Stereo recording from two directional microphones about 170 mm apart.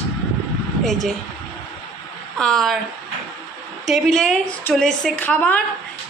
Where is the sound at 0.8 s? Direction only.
Centre (ahead or behind).